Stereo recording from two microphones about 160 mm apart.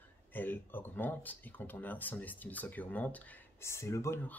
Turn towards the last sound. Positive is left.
turn(degrees=15)  # may be behind; listen again after turning